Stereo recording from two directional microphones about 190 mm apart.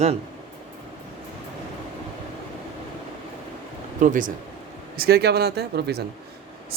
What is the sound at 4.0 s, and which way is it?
Speech, 45° right (ahead or behind).